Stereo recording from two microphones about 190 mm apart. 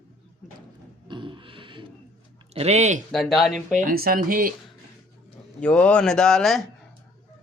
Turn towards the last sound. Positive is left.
turn(degrees=0)  # may be behind; listen again after turning